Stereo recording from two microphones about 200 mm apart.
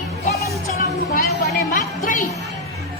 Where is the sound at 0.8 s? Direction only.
45° left (ahead or behind).